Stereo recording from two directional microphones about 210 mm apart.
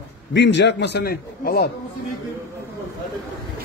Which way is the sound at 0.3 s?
55° left (ahead or behind).